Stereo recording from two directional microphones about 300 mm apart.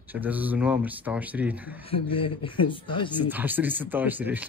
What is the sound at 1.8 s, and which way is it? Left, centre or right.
Speech, centre.